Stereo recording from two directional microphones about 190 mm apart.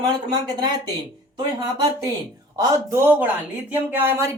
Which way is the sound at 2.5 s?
15° right (ahead or behind).